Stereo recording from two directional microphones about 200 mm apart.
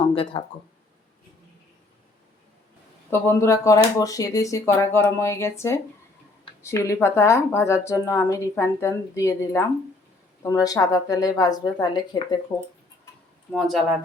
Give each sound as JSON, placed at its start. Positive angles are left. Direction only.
{"t": 0.1, "sound": "speech", "side_deg": 25}
{"t": 3.1, "sound": "a woman's voice", "side_deg": 15}
{"t": 13.5, "sound": "speech", "side_deg": 0}